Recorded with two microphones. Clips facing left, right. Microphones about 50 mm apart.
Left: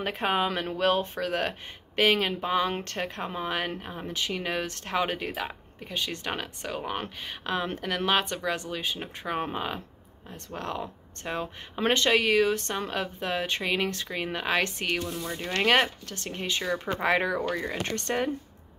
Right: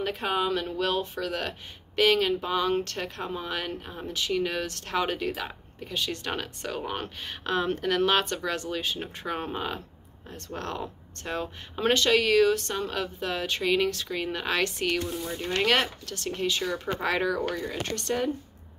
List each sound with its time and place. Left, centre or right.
0.0 s speech: left; by 11.8 s centre
11.8 s speech: left